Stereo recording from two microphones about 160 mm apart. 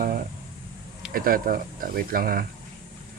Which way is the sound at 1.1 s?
65° right (ahead or behind).